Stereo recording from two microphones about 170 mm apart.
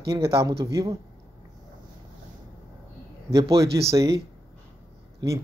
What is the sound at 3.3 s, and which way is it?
Speech, 20° right (ahead or behind).